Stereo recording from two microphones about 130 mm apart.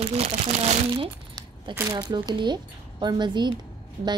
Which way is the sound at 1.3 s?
25° right (ahead or behind).